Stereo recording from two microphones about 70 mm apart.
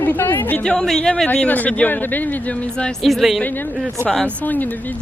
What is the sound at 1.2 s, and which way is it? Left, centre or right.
Speech, left.